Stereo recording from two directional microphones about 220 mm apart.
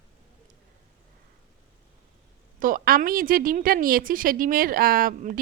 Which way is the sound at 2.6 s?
40° right (ahead or behind).